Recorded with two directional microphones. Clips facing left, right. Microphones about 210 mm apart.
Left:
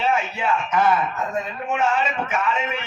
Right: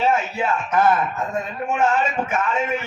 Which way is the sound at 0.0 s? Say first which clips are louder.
Right 2 dB; 45° right (ahead or behind).